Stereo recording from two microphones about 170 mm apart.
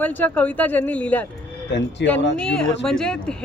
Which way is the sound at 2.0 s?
90° left.